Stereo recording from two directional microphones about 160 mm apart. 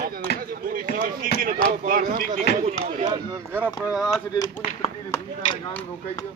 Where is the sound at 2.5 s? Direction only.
90° left.